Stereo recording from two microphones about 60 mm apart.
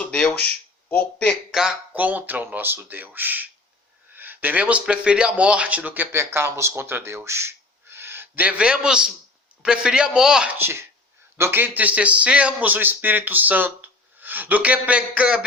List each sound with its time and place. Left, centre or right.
0.0 s a sound: centre
0.9 s speech: left
1.5 s a man's voice: centre
1.9 s speech: right
6.1 s speech: right
8.4 s a man's voice: right
10.6 s a man's voice: right
11.6 s a man's voice: right